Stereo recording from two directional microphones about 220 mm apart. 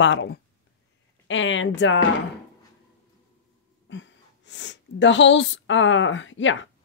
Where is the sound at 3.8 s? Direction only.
55° left (ahead or behind).